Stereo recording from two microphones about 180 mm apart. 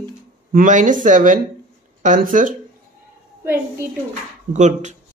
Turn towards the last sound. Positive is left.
turn(degrees=-40)  # may be behind; listen again after turning